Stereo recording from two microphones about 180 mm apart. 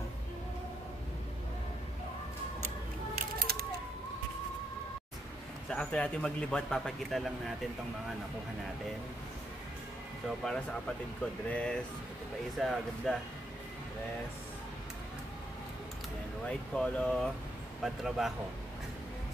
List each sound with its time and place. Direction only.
3.2 s a sound: 55° right (ahead or behind)
5.7 s a man's voice: 5° left (ahead or behind)
10.4 s a man's voice: 5° left (ahead or behind)
16.4 s a man's voice: 5° left (ahead or behind)